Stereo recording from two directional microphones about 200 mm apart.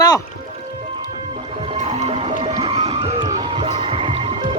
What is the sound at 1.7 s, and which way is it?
Music, 30° right (ahead or behind).